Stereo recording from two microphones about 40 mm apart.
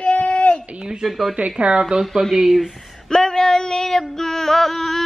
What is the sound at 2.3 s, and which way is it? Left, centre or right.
Speech, centre.